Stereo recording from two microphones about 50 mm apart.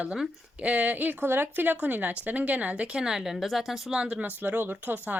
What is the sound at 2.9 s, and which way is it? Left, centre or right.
Speech, centre.